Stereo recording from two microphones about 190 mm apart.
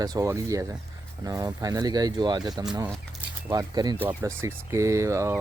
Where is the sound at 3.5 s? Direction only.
20° right (ahead or behind).